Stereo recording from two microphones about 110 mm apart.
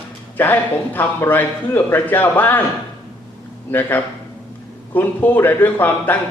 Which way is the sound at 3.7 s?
20° left (ahead or behind).